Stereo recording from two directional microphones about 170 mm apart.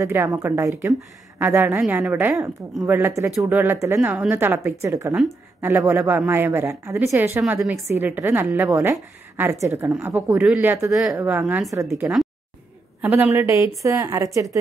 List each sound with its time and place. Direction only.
0.0 s a woman's voice: 15° right (ahead or behind)